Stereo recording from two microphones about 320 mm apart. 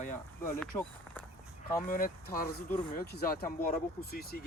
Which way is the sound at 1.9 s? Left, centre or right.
Left.